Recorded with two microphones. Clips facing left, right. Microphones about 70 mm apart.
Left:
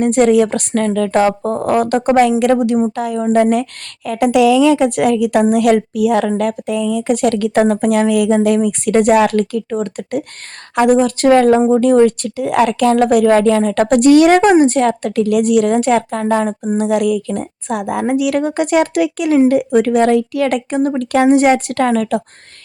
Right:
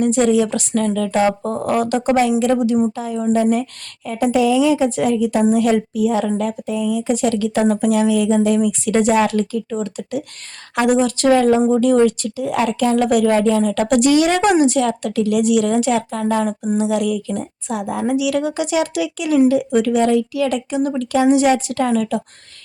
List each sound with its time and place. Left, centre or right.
0.0 s speech: left
1.3 s speech: left
2.9 s a woman's voice: left
14.4 s a woman's voice: left
14.8 s speech: left